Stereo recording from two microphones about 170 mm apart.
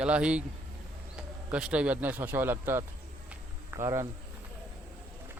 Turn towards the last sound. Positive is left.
turn(degrees=-20)  # may be behind; listen again after turning